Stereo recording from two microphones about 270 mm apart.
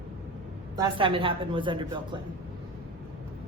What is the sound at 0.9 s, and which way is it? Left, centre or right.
A woman's voice, centre.